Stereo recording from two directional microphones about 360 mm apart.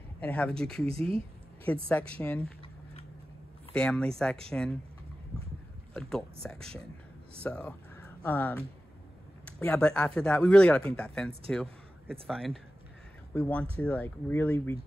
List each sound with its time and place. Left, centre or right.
0.2 s speech: centre
0.8 s a sound: centre
1.9 s speech: centre
3.7 s speech: centre
5.9 s a man's voice: centre